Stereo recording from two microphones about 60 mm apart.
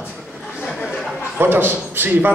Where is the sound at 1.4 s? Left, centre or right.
Right.